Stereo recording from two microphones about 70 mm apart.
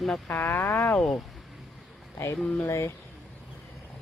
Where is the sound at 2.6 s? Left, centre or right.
Left.